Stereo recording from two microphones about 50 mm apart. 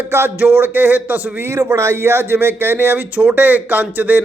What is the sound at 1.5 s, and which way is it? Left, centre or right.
Speech, right.